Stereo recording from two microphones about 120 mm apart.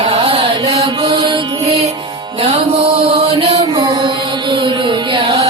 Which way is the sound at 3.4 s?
50° right (ahead or behind).